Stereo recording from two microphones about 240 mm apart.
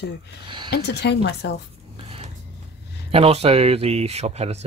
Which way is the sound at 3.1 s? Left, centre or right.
Right.